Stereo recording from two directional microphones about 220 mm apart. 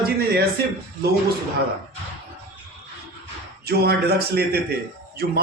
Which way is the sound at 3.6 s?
45° right (ahead or behind).